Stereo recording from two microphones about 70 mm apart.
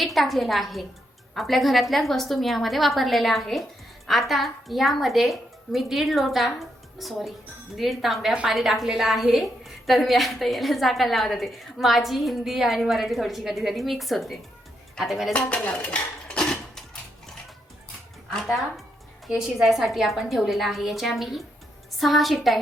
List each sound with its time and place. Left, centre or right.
0.0 s a woman's voice: centre
15.3 s dishes: centre
18.3 s a woman's voice: centre